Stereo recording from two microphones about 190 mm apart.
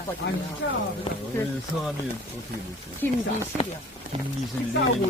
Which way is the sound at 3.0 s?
10° left (ahead or behind).